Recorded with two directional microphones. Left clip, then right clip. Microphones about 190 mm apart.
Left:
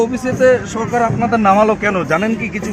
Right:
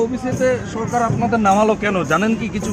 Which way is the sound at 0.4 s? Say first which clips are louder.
Left 7 dB; 50° left (ahead or behind).